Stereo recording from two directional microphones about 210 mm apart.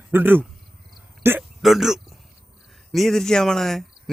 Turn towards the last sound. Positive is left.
turn(degrees=0)  # may be behind; listen again after turning